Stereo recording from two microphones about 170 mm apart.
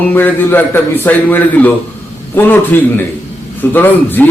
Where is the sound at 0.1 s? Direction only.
10° left (ahead or behind).